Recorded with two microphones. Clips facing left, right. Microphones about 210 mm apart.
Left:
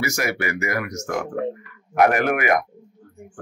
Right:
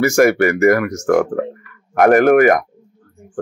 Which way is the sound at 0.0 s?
50° right (ahead or behind).